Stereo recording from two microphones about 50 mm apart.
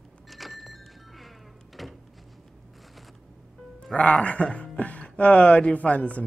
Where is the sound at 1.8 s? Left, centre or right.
Centre.